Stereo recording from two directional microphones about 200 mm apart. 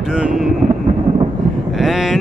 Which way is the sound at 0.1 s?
5° right (ahead or behind).